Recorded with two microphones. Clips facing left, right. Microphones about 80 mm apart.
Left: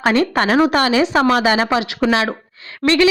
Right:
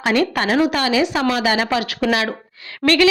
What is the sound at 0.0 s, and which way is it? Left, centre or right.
A woman's voice, left.